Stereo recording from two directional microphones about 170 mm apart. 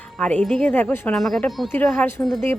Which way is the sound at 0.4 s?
5° left (ahead or behind).